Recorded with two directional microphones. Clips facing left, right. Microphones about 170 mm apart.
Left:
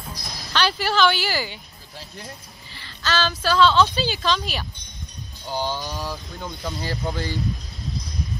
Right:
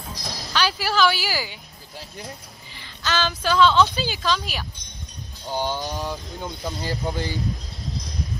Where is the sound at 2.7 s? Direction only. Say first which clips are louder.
Left 1 dB; 15° right (ahead or behind).